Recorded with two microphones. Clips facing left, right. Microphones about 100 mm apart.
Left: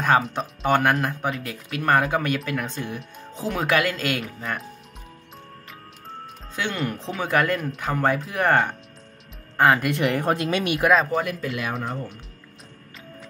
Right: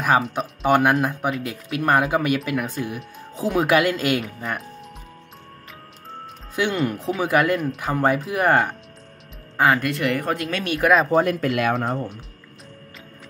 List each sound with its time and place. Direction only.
0.0 s speech: 5° right (ahead or behind)
6.5 s speech: 10° right (ahead or behind)
9.6 s speech: centre (ahead or behind)
9.8 s speech: 20° left (ahead or behind)
10.8 s speech: centre (ahead or behind)
11.1 s speech: 45° right (ahead or behind)